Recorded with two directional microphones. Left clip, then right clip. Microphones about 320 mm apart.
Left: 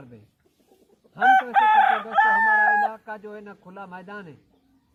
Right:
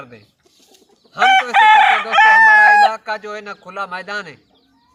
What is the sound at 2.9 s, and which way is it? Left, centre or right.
Speech, centre.